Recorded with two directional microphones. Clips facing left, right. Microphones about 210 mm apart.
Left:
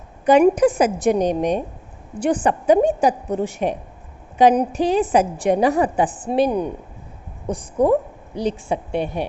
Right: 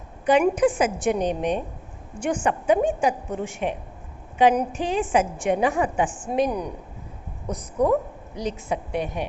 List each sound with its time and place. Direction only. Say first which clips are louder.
0.3 s a woman's voice: left 5 dB; 40° left (ahead or behind)